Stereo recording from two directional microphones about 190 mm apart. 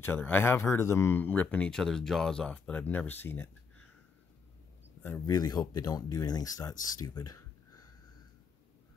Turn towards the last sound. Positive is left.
turn(degrees=20)  # may be behind; listen again after turning